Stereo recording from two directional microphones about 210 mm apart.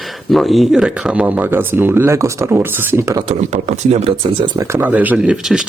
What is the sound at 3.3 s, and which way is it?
Speech, 30° right (ahead or behind).